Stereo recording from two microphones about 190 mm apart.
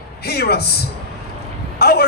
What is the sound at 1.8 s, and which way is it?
Speech, 55° left (ahead or behind).